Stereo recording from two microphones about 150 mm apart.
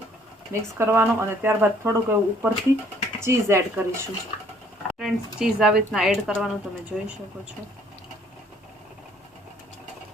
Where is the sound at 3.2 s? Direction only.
20° right (ahead or behind).